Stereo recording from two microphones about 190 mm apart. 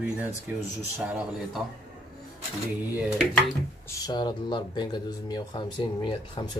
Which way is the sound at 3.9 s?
20° left (ahead or behind).